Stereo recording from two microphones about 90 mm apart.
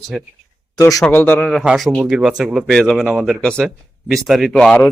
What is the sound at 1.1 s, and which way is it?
Speech, 20° left (ahead or behind).